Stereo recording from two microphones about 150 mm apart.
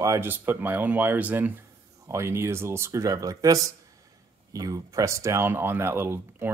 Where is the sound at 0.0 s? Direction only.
20° right (ahead or behind).